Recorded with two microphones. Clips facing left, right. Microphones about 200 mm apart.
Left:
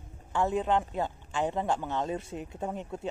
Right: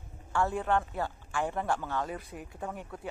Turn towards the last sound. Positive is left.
turn(degrees=25)  # may be behind; listen again after turning